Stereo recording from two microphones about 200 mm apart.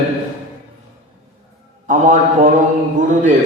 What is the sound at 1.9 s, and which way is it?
A man's voice, 40° right (ahead or behind).